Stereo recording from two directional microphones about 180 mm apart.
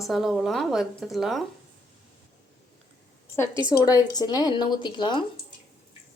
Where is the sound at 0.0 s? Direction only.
Centre (ahead or behind).